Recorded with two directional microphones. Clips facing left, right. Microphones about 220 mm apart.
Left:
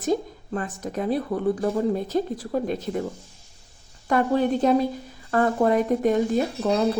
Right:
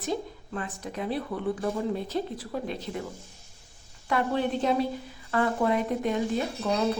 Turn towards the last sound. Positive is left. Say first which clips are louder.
# left 5 dB
turn(degrees=45)  # may be behind; listen again after turning